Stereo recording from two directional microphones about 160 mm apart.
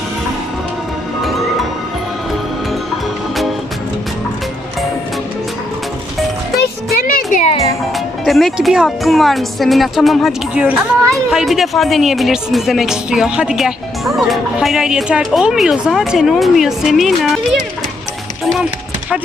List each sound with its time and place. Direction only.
6.6 s music: 70° left (ahead or behind)
7.9 s speech: centre (ahead or behind)
18.4 s music: centre (ahead or behind)